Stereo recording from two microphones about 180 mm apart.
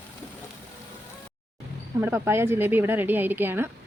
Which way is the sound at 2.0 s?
10° right (ahead or behind).